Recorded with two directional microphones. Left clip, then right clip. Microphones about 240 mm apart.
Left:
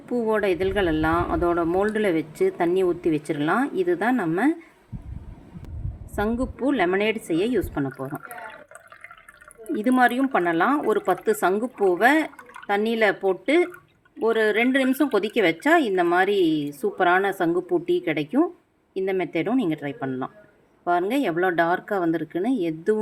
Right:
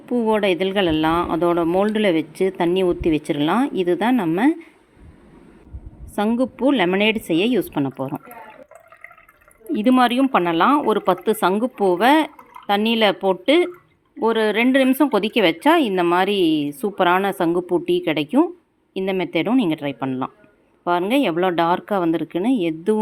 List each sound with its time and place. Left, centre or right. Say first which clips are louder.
0.1 s a woman's voice: right 4 dB; right
6.1 s a woman's voice: right 5 dB; right
9.7 s a woman's voice: right 3 dB; right